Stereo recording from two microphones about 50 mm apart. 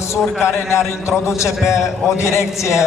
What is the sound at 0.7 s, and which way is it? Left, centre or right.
A man's voice, left.